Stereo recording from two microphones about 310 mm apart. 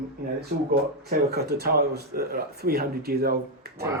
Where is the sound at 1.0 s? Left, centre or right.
Right.